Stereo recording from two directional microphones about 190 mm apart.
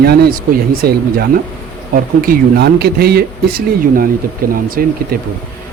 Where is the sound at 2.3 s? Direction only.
55° right (ahead or behind).